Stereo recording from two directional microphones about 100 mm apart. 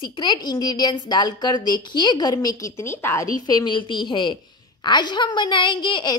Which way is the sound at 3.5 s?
45° left (ahead or behind).